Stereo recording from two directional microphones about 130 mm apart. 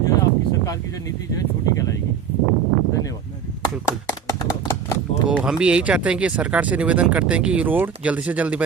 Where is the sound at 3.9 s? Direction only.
25° left (ahead or behind).